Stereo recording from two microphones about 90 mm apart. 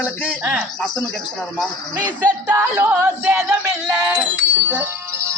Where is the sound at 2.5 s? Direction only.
20° right (ahead or behind).